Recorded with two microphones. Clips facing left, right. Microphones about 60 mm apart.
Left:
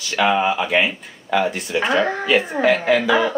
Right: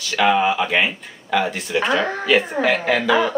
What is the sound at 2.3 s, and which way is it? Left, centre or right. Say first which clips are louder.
Speech: right 1 dB; centre.